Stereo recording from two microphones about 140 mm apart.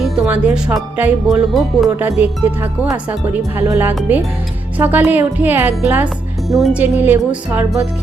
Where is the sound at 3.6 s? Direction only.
20° right (ahead or behind).